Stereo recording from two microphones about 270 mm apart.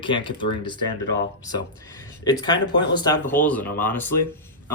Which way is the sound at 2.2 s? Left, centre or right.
Centre.